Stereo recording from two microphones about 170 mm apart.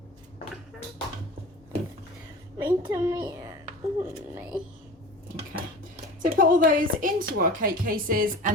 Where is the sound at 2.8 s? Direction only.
20° right (ahead or behind).